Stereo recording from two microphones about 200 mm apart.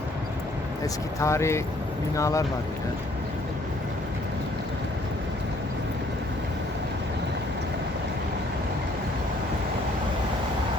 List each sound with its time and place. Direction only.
1.2 s speech: 15° left (ahead or behind)